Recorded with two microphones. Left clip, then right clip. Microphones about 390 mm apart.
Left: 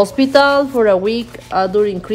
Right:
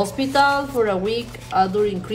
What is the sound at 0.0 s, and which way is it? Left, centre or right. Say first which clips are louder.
Speech: left 6 dB; left.